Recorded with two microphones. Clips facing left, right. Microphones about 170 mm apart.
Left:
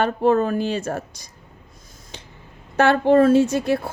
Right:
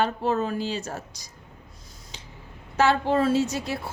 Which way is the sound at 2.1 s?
55° left (ahead or behind).